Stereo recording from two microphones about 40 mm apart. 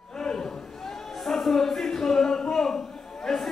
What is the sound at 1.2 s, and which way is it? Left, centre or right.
Music, centre.